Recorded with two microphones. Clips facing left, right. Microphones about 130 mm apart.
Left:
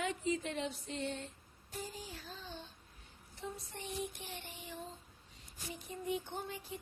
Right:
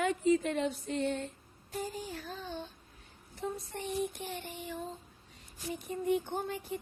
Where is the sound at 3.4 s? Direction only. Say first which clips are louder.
Right 7 dB; 55° right (ahead or behind).